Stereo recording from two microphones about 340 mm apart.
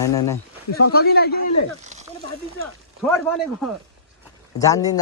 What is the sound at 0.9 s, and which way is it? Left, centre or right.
Speech, left.